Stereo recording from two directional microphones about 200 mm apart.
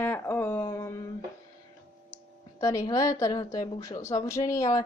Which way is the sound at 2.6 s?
15° left (ahead or behind).